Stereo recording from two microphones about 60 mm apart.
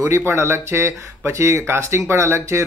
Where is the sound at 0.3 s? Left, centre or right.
Right.